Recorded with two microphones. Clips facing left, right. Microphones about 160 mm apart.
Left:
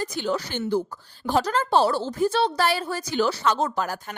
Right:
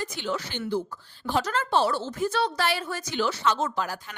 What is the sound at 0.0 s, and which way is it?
A woman's voice, 40° left (ahead or behind).